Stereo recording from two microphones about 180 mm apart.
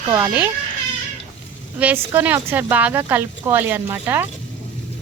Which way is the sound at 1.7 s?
10° right (ahead or behind).